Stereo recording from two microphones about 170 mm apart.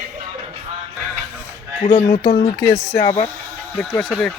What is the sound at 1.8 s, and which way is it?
Speech, 35° left (ahead or behind).